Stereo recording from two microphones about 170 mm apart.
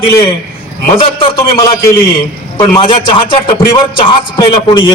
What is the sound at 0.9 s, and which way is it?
A man's voice, 30° left (ahead or behind).